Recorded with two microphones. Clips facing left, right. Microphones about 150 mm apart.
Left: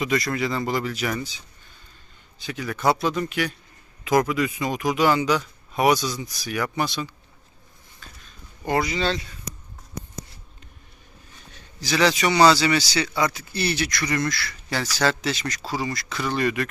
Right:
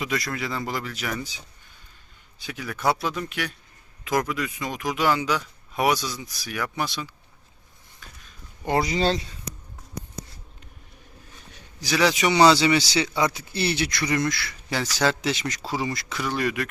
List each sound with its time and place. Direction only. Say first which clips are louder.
0.0 s speech: left 5 dB; 5° right (ahead or behind)
2.4 s speech: left 2 dB; 5° right (ahead or behind)
8.0 s a sound: left 1 dB; 15° right (ahead or behind)
8.6 s speech: even; 25° right (ahead or behind)
8.9 s speech: right 2 dB; 35° right (ahead or behind)
11.8 s speech: left 1 dB; 10° right (ahead or behind)
16.2 s speech: left 2 dB; 5° right (ahead or behind)